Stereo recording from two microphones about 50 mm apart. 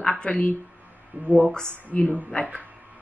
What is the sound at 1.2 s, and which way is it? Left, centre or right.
Speech, right.